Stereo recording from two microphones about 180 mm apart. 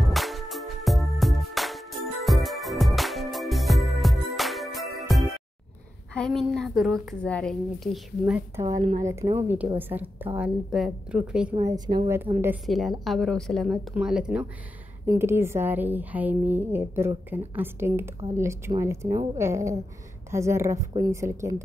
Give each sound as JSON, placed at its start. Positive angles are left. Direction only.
{"t": 0.0, "sound": "music", "side_deg": 0}
{"t": 6.1, "sound": "a woman's voice", "side_deg": 5}
{"t": 8.7, "sound": "speech", "side_deg": -35}
{"t": 9.0, "sound": "a woman's voice", "side_deg": -15}
{"t": 11.5, "sound": "speech", "side_deg": -20}
{"t": 12.6, "sound": "a woman's voice", "side_deg": 0}